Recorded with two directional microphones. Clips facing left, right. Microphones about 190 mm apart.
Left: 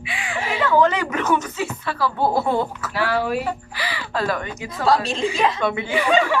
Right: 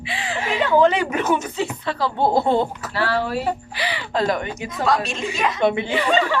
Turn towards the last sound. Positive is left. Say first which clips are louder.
# left 1 dB
turn(degrees=10)  # may be behind; listen again after turning